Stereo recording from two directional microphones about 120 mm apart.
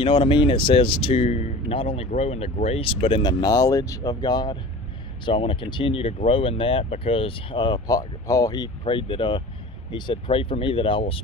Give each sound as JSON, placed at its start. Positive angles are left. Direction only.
{"t": 0.0, "sound": "speech", "side_deg": 45}
{"t": 3.2, "sound": "speech", "side_deg": 35}
{"t": 8.8, "sound": "speech", "side_deg": 45}